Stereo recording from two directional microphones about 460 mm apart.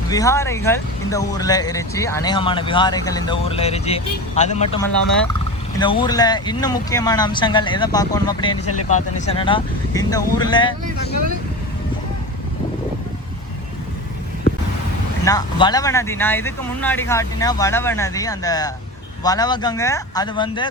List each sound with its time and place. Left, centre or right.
0.1 s speech: centre
8.5 s speech: left
8.9 s speech: centre
15.2 s speech: centre